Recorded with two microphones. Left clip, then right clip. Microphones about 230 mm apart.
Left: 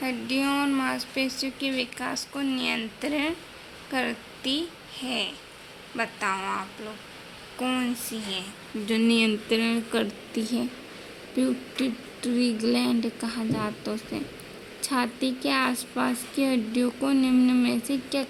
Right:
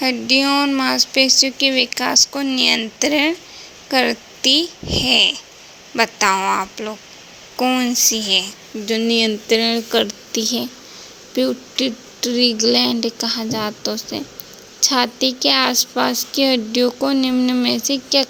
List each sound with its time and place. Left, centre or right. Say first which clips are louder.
0.0 s a woman's voice: right 11 dB; right
8.9 s a woman's voice: right 7 dB; centre